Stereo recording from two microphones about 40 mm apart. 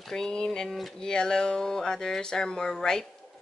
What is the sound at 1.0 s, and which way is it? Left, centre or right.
Speech, centre.